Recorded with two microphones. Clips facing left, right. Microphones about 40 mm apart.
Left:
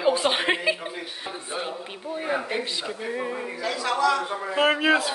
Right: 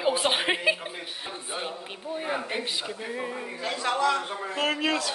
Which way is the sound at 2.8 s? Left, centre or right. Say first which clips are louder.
Left 3 dB; centre.